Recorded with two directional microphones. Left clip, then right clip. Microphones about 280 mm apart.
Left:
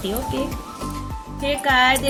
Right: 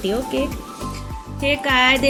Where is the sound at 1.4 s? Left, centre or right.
Centre.